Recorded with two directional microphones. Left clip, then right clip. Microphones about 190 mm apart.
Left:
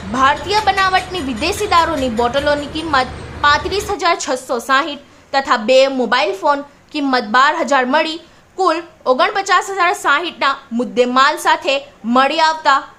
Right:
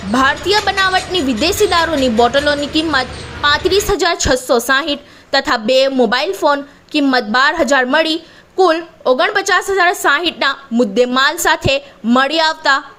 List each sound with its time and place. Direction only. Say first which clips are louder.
0.1 s a woman's voice: right 1 dB; 25° right (ahead or behind)